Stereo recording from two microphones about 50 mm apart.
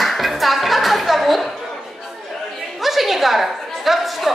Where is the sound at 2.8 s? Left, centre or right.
Centre.